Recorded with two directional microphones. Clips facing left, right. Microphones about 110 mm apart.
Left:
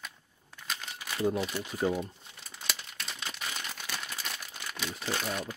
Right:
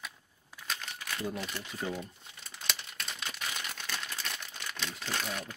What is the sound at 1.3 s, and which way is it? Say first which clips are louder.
Speech: left 6 dB; 5° left (ahead or behind).